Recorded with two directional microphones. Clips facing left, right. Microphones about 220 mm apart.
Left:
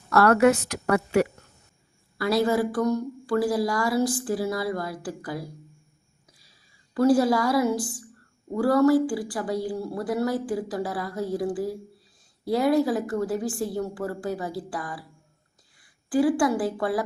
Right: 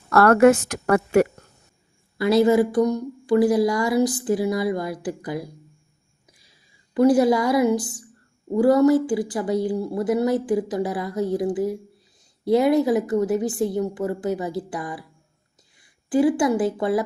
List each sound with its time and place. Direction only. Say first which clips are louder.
0.1 s a woman's voice: right 4 dB; 55° right (ahead or behind)
2.1 s a woman's voice: right 6 dB; 20° right (ahead or behind)
6.9 s a woman's voice: right 3 dB; 20° right (ahead or behind)